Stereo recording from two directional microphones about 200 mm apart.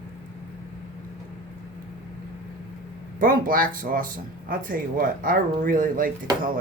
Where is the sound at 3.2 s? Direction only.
45° right (ahead or behind).